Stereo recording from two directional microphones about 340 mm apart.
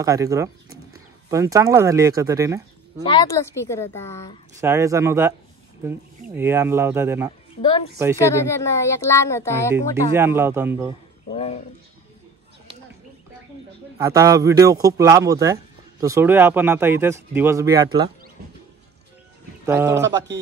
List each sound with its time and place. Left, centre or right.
0.0 s speech: centre
3.1 s speech: centre
4.6 s speech: centre
6.3 s speech: centre
8.2 s speech: centre
10.1 s speech: centre
11.3 s speech: centre
13.9 s speech: centre
18.4 s music: right
19.6 s speech: centre
20.0 s a man's voice: right